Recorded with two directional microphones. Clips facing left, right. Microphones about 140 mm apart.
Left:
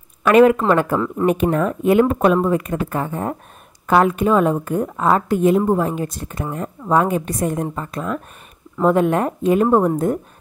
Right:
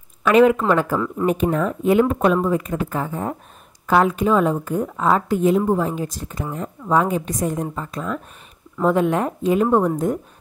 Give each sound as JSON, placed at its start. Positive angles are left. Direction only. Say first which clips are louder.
{"t": 0.2, "sound": "a woman's voice", "louder": "left 2 dB", "side_deg": 55}
{"t": 0.9, "sound": "speech", "louder": "left 2 dB", "side_deg": 30}
{"t": 1.2, "sound": "a woman's voice", "louder": "left 2 dB", "side_deg": 65}
{"t": 9.7, "sound": "a woman's voice", "louder": "left 2 dB", "side_deg": 40}